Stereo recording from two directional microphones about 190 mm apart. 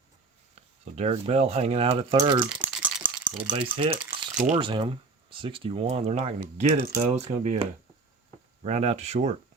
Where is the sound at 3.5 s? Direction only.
25° right (ahead or behind).